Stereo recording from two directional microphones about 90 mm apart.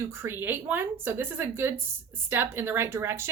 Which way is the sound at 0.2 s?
25° right (ahead or behind).